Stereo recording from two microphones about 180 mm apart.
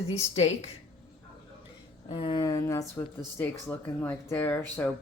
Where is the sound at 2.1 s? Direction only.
30° left (ahead or behind).